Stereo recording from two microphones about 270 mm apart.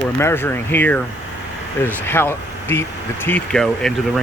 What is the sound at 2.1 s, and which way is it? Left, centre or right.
Speech, centre.